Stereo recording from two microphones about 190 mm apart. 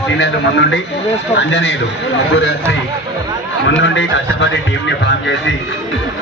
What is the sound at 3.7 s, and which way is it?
Speech, 75° left (ahead or behind).